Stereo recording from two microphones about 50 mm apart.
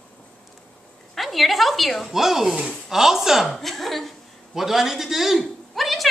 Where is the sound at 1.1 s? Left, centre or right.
Centre.